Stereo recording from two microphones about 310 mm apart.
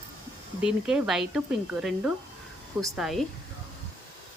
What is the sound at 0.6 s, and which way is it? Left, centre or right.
Speech, centre.